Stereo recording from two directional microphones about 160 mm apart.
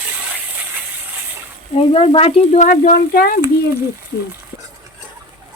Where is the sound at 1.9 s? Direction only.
35° left (ahead or behind); by 3.4 s 60° left (ahead or behind).